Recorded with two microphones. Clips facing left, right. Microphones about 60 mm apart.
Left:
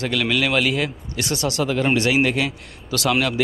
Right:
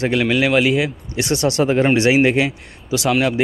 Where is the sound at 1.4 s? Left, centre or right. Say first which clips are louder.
Right 5 dB; right.